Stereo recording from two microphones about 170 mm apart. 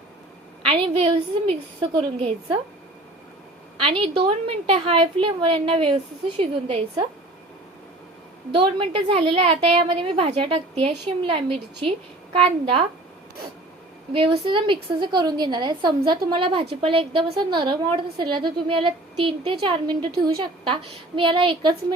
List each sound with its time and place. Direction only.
0.6 s a woman's voice: 35° right (ahead or behind)
3.8 s a woman's voice: 35° right (ahead or behind)
8.5 s a woman's voice: 30° right (ahead or behind)
14.1 s a woman's voice: 30° right (ahead or behind)